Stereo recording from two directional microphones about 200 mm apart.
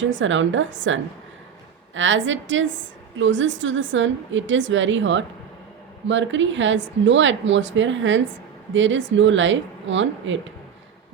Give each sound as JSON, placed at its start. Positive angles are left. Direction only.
{"t": 0.0, "sound": "speech", "side_deg": -70}
{"t": 2.0, "sound": "speech", "side_deg": -70}